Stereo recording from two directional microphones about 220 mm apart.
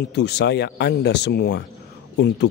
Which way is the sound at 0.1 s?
50° left (ahead or behind).